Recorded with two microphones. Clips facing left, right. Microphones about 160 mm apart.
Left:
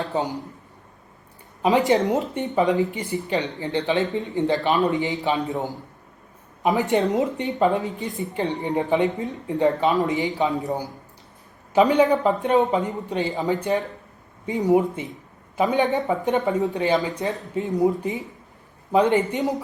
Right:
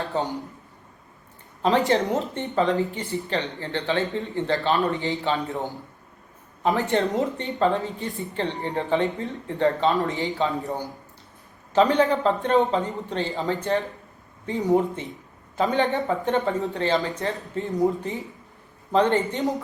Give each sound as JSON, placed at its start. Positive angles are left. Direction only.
{"t": 0.0, "sound": "speech", "side_deg": 20}
{"t": 1.6, "sound": "speech", "side_deg": 10}